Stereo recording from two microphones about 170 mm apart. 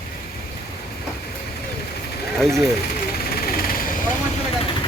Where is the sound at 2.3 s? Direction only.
Centre (ahead or behind).